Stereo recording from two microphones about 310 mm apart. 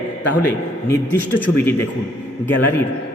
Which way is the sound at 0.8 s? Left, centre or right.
Centre.